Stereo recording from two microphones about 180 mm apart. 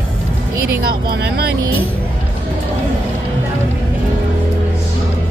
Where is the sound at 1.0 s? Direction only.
60° right (ahead or behind).